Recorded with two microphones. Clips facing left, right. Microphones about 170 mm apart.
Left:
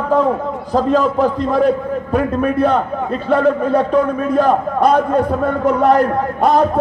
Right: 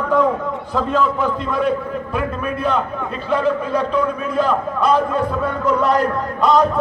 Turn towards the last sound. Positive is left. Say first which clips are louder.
# left 2 dB
turn(degrees=55)  # may be behind; listen again after turning